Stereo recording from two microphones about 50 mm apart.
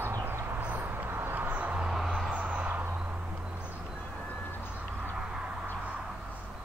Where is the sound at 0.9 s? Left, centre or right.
Right.